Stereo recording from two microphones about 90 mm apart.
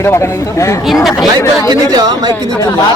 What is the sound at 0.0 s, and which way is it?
Speech, 30° left (ahead or behind).